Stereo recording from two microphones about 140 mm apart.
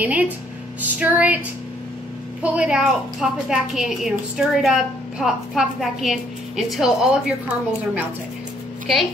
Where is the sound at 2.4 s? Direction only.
5° right (ahead or behind).